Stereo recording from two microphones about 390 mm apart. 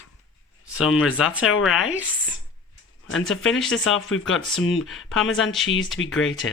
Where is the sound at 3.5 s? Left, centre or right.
Centre.